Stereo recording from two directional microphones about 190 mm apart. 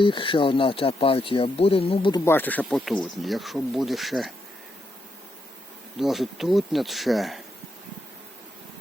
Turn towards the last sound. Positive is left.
turn(degrees=0)  # may be behind; listen again after turning